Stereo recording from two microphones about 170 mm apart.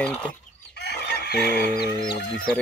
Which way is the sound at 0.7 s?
75° left (ahead or behind).